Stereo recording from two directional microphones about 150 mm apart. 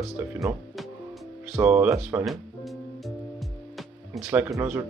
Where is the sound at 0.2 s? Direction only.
20° right (ahead or behind).